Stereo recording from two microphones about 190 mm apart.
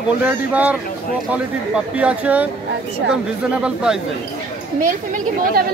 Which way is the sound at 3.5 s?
5° right (ahead or behind).